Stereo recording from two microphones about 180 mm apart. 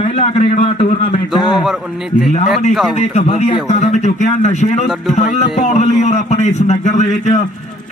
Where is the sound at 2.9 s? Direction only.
40° left (ahead or behind).